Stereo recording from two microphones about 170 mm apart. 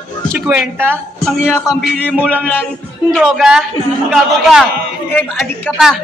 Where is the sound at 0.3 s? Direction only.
5° right (ahead or behind).